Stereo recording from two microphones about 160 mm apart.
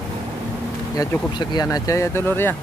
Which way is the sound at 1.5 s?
25° left (ahead or behind).